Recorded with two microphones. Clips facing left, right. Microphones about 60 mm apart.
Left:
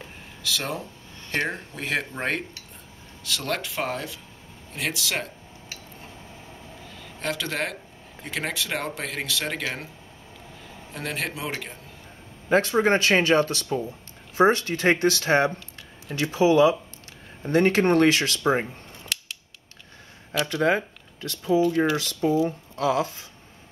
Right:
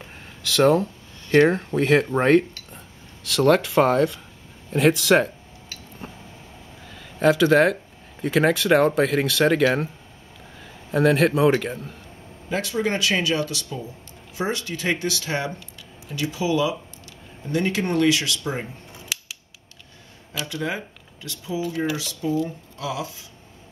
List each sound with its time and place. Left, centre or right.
0.6 s speech: right
3.3 s speech: centre
6.9 s speech: centre
11.0 s speech: centre
12.4 s speech: left
19.1 s scissors: centre
20.4 s speech: left
21.6 s speech: centre
21.9 s speech: left